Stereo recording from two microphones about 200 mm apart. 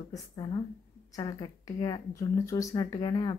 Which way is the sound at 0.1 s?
20° left (ahead or behind).